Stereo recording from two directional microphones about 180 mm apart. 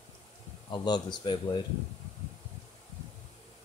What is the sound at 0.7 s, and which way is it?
Speech, 25° left (ahead or behind).